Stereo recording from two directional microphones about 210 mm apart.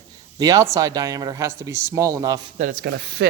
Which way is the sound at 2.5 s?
40° right (ahead or behind).